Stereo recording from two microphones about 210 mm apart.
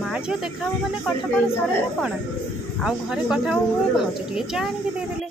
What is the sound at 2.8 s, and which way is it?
Speech, centre (ahead or behind).